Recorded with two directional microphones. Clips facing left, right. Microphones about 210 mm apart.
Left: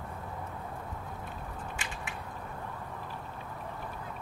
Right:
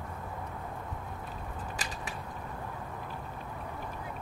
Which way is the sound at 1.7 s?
35° right (ahead or behind).